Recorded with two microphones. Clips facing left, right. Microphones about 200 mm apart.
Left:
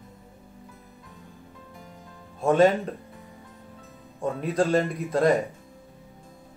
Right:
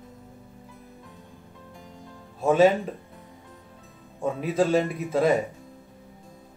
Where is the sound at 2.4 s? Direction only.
5° right (ahead or behind).